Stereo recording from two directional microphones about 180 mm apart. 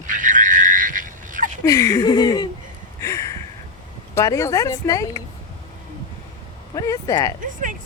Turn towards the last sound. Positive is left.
turn(degrees=-45)  # may be behind; listen again after turning